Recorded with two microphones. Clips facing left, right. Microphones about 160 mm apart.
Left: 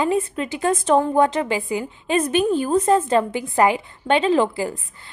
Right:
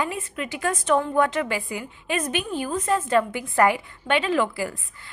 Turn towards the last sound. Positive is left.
turn(degrees=25)  # may be behind; listen again after turning